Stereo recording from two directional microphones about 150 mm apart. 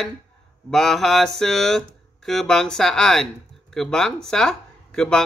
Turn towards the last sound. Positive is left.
turn(degrees=5)  # may be behind; listen again after turning